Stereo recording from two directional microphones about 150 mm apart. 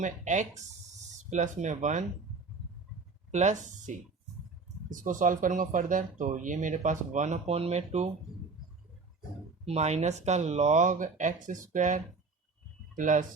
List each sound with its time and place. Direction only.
0.0 s speech: 55° right (ahead or behind)
3.3 s speech: 55° right (ahead or behind)
9.6 s speech: 45° right (ahead or behind)